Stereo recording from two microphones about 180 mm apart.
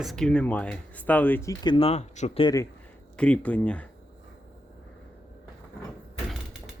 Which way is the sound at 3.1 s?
5° left (ahead or behind).